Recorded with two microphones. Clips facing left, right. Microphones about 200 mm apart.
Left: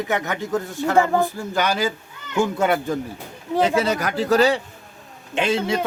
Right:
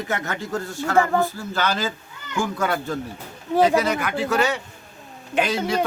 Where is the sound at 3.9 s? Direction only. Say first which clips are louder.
Left 4 dB; 40° left (ahead or behind).